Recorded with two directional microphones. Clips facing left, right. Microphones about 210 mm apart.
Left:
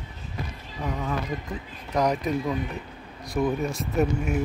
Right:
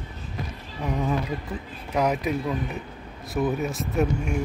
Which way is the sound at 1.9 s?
10° right (ahead or behind).